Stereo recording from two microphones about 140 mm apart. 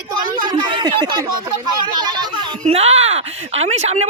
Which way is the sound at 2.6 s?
45° right (ahead or behind).